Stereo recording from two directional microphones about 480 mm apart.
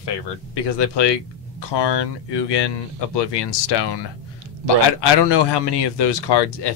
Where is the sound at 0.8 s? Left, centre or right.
Left.